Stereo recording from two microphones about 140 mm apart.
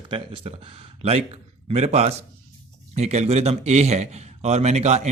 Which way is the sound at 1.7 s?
45° right (ahead or behind).